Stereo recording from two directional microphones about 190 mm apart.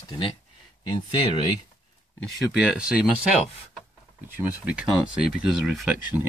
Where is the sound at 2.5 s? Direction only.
5° right (ahead or behind).